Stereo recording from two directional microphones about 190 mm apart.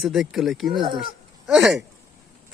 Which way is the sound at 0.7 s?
25° right (ahead or behind).